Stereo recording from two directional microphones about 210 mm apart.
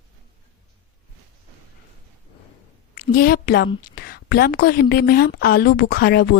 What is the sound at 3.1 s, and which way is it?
A woman's voice, 45° left (ahead or behind).